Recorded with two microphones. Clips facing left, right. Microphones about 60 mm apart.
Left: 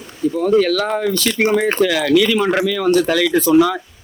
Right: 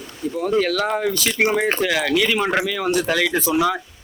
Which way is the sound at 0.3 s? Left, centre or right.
Centre.